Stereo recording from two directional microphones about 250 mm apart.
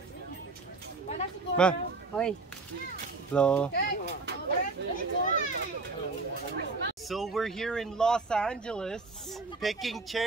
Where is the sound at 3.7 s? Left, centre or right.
Left.